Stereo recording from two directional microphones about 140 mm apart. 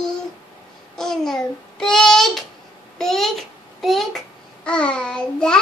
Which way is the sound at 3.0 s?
Centre (ahead or behind).